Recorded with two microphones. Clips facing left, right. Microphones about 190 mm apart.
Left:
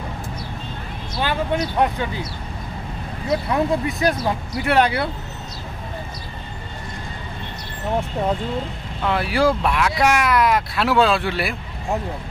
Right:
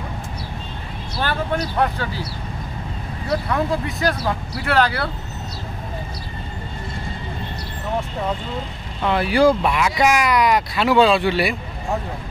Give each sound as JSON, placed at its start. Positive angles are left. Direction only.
{"t": 1.2, "sound": "speech", "side_deg": 15}
{"t": 3.3, "sound": "speech", "side_deg": 20}
{"t": 9.0, "sound": "speech", "side_deg": 0}